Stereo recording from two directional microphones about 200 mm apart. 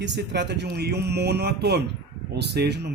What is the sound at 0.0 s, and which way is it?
Speech, 60° right (ahead or behind).